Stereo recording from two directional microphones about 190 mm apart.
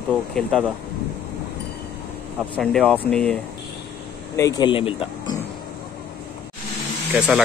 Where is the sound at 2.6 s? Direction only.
5° left (ahead or behind).